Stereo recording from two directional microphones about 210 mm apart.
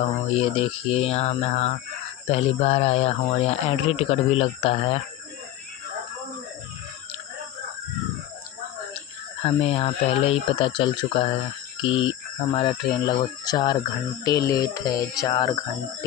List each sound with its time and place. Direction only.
0.3 s speech: 30° left (ahead or behind)
9.4 s speech: 30° left (ahead or behind)